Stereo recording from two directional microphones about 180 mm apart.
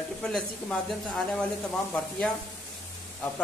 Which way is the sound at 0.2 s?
5° left (ahead or behind).